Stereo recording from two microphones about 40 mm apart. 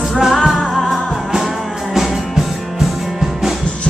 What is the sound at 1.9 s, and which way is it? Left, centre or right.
Music, centre.